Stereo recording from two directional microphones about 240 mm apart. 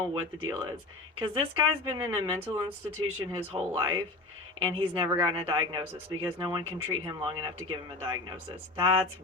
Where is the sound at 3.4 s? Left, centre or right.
Right.